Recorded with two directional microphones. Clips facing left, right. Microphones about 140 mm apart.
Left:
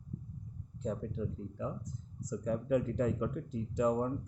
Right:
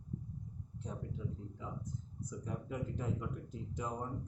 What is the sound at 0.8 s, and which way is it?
Speech, 85° left.